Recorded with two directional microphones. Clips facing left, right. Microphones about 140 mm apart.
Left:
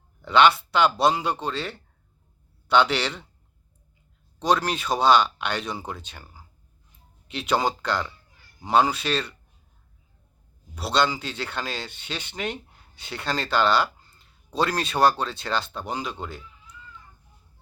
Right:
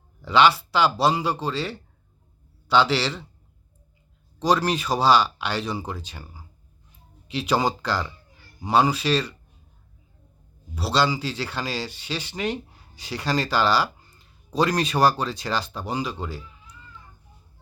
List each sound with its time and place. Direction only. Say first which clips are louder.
0.2 s speech: even; 5° right (ahead or behind)
4.4 s speech: right 2 dB; 10° right (ahead or behind)
10.8 s speech: right 1 dB; 5° right (ahead or behind)